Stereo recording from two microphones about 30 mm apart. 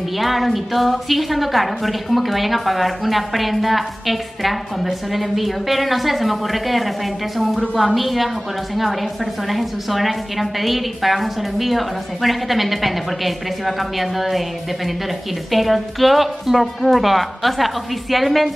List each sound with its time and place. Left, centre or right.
0.2 s a woman's voice: centre
15.5 s a woman's voice: centre